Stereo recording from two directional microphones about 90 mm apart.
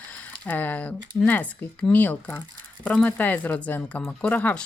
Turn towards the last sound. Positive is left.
turn(degrees=15)  # may be behind; listen again after turning